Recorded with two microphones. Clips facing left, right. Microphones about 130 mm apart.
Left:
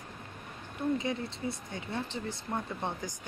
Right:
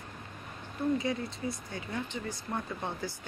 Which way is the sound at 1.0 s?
20° left (ahead or behind).